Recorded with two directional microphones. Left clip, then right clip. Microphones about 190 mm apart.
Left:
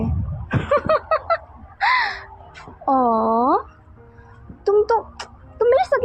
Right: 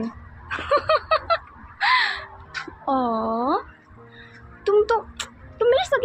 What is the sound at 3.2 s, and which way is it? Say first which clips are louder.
Speech: left 6 dB; 40° left (ahead or behind).